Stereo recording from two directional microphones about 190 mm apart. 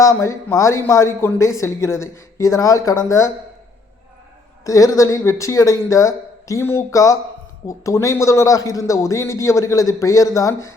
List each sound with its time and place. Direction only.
0.0 s a man's voice: 15° left (ahead or behind)
4.6 s a man's voice: 15° left (ahead or behind)